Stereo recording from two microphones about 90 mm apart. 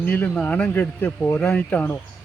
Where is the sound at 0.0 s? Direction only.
20° left (ahead or behind).